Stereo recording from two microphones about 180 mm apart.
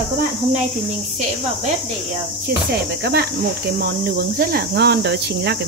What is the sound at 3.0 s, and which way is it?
Speech, 60° right (ahead or behind).